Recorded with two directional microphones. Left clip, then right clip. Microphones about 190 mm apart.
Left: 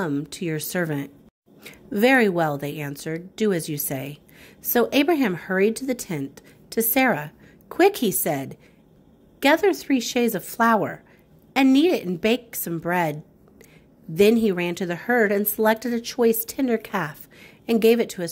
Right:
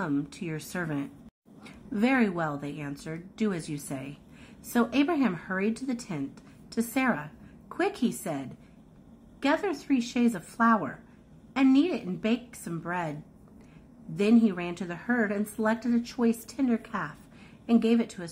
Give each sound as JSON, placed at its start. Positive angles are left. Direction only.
{"t": 0.3, "sound": "a woman's voice", "side_deg": 25}